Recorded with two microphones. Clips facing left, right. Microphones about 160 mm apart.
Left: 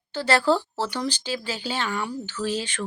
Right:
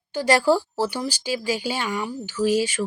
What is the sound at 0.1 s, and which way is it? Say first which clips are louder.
Speech: right 2 dB; 10° right (ahead or behind).